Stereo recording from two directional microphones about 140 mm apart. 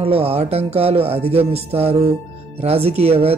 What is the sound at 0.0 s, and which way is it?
Speech, 45° right (ahead or behind).